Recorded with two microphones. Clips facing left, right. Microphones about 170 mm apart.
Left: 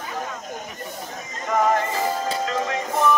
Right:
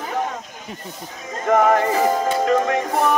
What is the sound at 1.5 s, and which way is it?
Music, 55° right (ahead or behind).